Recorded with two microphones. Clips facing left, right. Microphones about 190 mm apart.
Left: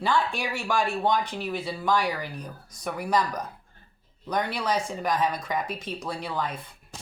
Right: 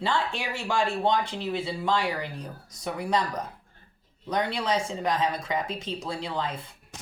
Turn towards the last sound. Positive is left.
turn(degrees=-25)  # may be behind; listen again after turning